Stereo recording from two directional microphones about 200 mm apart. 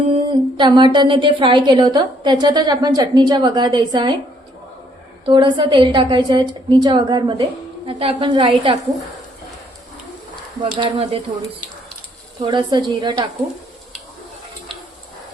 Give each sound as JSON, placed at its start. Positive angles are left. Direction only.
{"t": 0.1, "sound": "a sound", "side_deg": -25}
{"t": 0.9, "sound": "a woman's voice", "side_deg": -25}
{"t": 5.2, "sound": "a woman's voice", "side_deg": -25}
{"t": 10.6, "sound": "a woman's voice", "side_deg": -25}
{"t": 12.4, "sound": "a woman's voice", "side_deg": -25}